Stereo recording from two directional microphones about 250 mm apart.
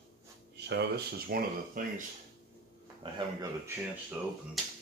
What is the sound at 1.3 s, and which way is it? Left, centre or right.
Speech, right.